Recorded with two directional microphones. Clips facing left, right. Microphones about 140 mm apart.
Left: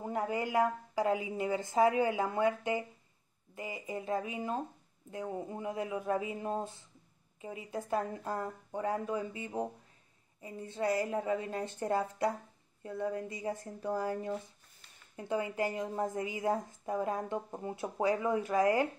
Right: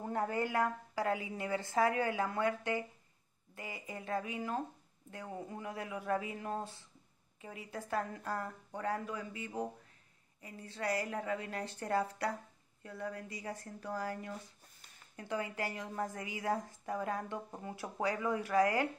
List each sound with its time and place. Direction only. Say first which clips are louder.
0.0 s a woman's voice: left 1 dB; 15° left (ahead or behind)